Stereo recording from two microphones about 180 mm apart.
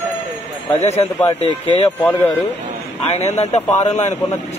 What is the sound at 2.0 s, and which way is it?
Speech, 10° left (ahead or behind).